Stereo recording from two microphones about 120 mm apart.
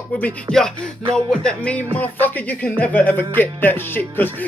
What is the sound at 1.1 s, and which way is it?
Speech, 5° left (ahead or behind).